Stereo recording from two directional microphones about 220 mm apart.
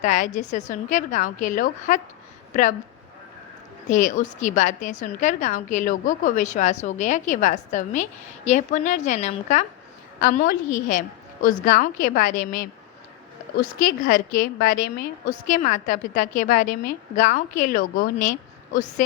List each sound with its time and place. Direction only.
0.0 s a woman's voice: 35° left (ahead or behind)
3.8 s a woman's voice: 35° left (ahead or behind)
13.8 s a woman's voice: 40° left (ahead or behind)